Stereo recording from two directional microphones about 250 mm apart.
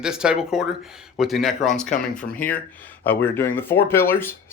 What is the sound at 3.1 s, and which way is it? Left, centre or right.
Speech, centre.